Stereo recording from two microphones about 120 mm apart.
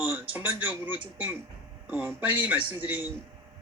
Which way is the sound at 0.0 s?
15° right (ahead or behind).